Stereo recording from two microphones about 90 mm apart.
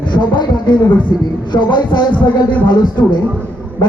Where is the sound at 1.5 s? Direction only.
55° left (ahead or behind).